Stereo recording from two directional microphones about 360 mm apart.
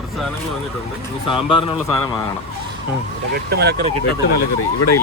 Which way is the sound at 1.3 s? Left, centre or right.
Centre.